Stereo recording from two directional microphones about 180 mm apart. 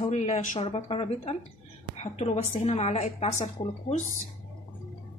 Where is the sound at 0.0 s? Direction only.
40° left (ahead or behind).